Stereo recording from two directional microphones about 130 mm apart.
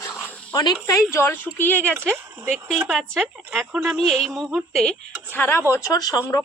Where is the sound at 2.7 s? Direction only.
Centre (ahead or behind).